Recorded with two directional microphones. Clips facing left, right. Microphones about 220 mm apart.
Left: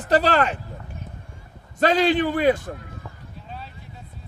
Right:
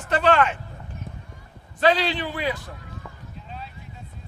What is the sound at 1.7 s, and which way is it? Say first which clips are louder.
A man's voice: left 3 dB; 45° left (ahead or behind).